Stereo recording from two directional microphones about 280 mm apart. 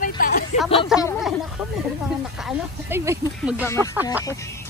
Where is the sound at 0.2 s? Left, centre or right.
Left.